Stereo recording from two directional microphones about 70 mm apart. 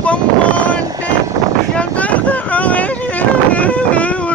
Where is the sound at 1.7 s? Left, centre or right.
Left.